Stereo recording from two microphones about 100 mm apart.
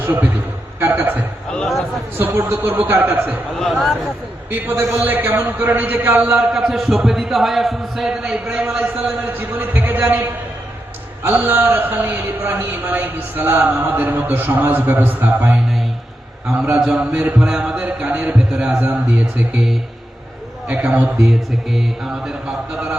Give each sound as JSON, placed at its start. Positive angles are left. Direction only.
{"t": 0.0, "sound": "a man's voice", "side_deg": -20}
{"t": 1.5, "sound": "a man's voice", "side_deg": 5}
{"t": 2.1, "sound": "a man's voice", "side_deg": -20}
{"t": 3.6, "sound": "a man's voice", "side_deg": 0}
{"t": 4.5, "sound": "a man's voice", "side_deg": -20}
{"t": 6.5, "sound": "a man's voice", "side_deg": -5}
{"t": 9.2, "sound": "a man's voice", "side_deg": -20}
{"t": 16.8, "sound": "speech", "side_deg": -10}
{"t": 20.7, "sound": "a man's voice", "side_deg": -15}